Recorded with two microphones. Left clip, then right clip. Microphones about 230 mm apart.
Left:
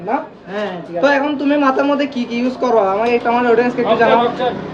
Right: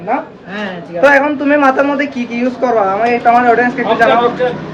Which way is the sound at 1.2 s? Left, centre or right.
Centre.